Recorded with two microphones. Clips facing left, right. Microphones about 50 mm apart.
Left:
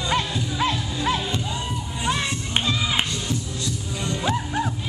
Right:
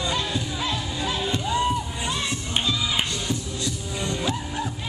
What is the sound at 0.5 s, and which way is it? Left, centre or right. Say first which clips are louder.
Music: left 4 dB; left.